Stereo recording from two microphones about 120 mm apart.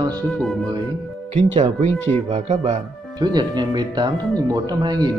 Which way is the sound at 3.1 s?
35° right (ahead or behind).